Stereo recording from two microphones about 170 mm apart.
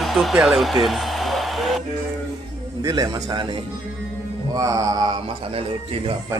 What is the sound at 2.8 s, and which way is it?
Speech, 25° right (ahead or behind).